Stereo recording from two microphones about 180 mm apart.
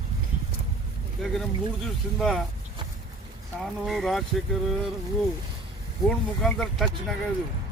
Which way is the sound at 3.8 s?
Centre (ahead or behind).